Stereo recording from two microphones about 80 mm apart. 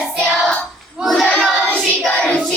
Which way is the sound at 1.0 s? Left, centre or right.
Centre.